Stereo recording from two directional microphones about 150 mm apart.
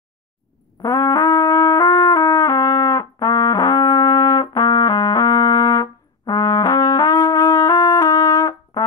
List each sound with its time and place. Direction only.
0.8 s music: 20° left (ahead or behind)